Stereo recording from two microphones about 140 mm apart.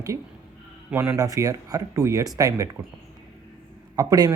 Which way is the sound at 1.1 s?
25° right (ahead or behind).